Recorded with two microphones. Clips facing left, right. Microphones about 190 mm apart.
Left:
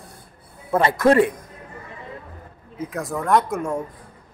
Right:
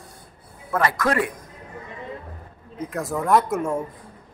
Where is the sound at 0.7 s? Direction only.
30° left (ahead or behind).